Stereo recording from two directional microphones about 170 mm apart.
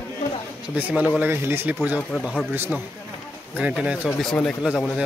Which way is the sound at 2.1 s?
5° left (ahead or behind).